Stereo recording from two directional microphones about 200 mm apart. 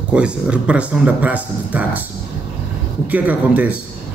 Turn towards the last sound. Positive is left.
turn(degrees=-5)  # may be behind; listen again after turning